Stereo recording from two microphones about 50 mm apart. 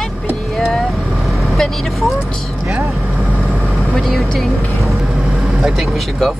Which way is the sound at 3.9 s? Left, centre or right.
Centre.